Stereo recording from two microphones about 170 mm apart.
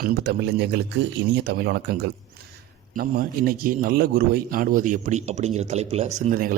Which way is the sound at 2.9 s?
55° right (ahead or behind).